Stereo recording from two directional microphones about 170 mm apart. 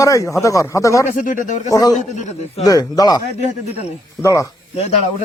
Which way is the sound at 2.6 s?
20° left (ahead or behind).